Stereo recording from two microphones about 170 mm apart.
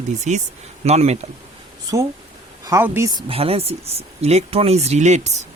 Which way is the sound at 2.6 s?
15° right (ahead or behind).